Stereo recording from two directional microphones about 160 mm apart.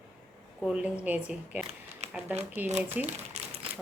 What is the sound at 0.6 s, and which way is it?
Speech, 5° right (ahead or behind).